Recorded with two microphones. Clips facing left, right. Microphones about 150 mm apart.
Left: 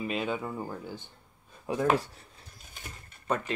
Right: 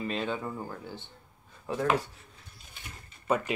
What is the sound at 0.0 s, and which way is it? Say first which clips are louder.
Speech: left 1 dB; 10° left (ahead or behind).